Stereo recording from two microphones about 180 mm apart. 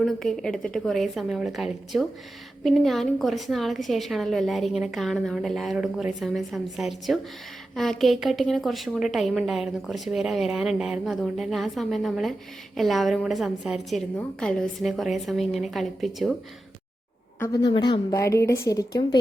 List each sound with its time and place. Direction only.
0.0 s a woman's voice: centre (ahead or behind)
17.4 s a woman's voice: 20° left (ahead or behind)